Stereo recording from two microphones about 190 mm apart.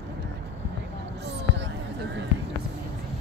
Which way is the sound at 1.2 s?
65° right (ahead or behind).